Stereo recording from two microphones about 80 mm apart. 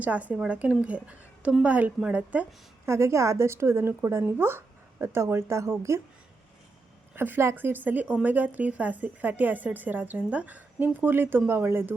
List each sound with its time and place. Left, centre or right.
0.0 s a woman's voice: centre
2.8 s a woman's voice: right
7.2 s speech: right